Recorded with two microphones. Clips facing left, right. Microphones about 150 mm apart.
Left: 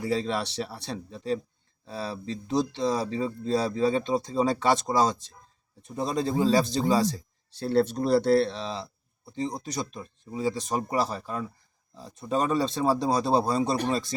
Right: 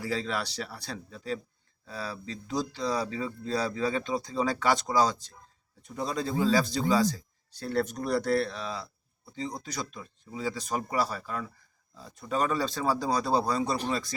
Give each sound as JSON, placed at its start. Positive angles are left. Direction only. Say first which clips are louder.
{"t": 0.0, "sound": "speech", "louder": "left 4 dB", "side_deg": 25}